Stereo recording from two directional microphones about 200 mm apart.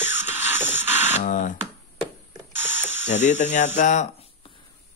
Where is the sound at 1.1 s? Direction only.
40° left (ahead or behind).